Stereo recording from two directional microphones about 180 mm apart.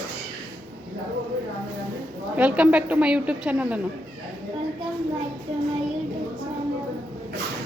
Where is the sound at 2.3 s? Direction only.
10° right (ahead or behind).